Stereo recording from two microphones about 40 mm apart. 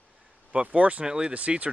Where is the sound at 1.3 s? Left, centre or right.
Right.